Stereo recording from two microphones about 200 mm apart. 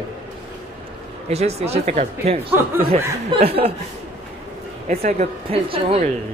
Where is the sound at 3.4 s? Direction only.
30° right (ahead or behind).